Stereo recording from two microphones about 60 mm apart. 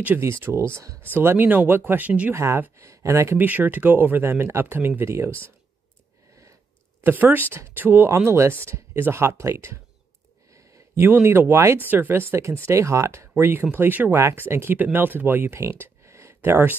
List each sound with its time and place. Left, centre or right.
0.2 s speech: right
1.9 s speech: right
2.3 s speech: right
3.3 s speech: right
4.2 s speech: right
7.0 s speech: right
8.1 s speech: right
11.0 s speech: right
11.8 s speech: right
13.4 s speech: right
15.7 s a sound: right